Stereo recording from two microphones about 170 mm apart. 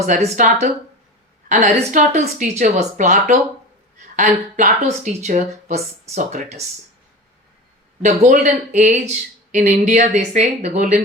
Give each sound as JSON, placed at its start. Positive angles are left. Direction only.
{"t": 0.0, "sound": "speech", "side_deg": -45}
{"t": 8.3, "sound": "speech", "side_deg": -45}